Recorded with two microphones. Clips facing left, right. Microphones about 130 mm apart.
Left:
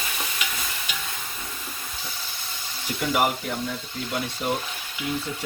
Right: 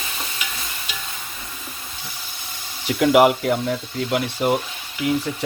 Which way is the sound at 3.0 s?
90° right.